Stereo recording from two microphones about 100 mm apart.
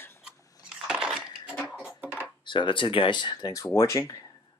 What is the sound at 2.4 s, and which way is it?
Speech, 55° left (ahead or behind).